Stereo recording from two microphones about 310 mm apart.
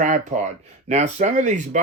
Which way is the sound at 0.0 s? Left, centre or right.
Right.